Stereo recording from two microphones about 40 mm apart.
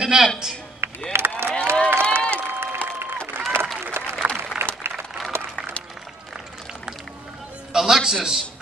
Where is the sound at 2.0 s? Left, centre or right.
Left.